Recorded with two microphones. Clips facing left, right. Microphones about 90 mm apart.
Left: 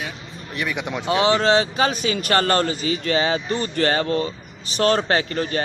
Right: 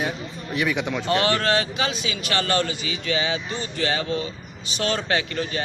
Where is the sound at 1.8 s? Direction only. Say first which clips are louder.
Left 6 dB; 45° left (ahead or behind).